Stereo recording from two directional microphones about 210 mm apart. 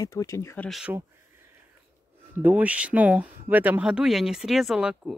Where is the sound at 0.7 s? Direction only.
5° right (ahead or behind).